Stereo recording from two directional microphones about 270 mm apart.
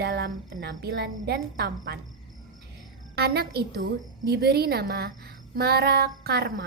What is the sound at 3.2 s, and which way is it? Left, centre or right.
A woman's voice, right.